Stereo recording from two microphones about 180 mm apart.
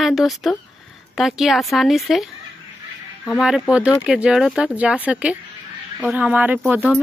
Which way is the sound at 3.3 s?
Centre (ahead or behind).